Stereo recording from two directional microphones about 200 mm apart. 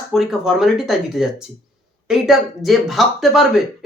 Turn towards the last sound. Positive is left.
turn(degrees=0)  # may be behind; listen again after turning